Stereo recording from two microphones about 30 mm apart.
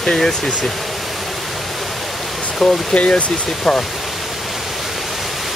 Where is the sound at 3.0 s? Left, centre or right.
Left.